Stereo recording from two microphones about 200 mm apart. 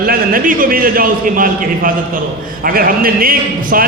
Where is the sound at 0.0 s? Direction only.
45° right (ahead or behind).